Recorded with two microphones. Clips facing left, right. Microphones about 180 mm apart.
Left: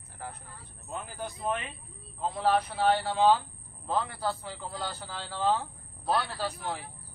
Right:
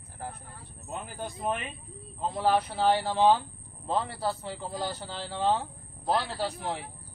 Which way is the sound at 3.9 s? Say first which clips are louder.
Right 1 dB; 30° right (ahead or behind).